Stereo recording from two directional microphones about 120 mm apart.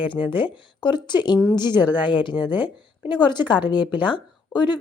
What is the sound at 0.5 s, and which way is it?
Speech, 40° left (ahead or behind).